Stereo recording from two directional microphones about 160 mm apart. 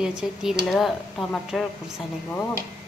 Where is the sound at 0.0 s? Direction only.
5° right (ahead or behind).